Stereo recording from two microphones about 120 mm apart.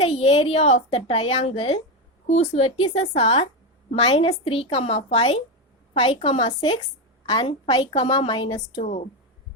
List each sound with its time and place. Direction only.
0.0 s a woman's voice: 60° left (ahead or behind)
2.2 s a woman's voice: 70° left (ahead or behind); by 6.5 s 50° left (ahead or behind)
7.3 s a woman's voice: 40° left (ahead or behind)
8.8 s speech: 75° left (ahead or behind)